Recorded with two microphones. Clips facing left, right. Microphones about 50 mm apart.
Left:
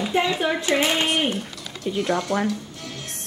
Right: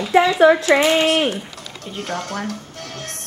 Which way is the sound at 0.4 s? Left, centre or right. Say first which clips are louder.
Right 9 dB; right.